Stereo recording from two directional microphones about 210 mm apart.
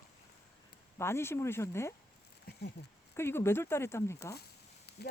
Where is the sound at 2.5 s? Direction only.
50° left (ahead or behind).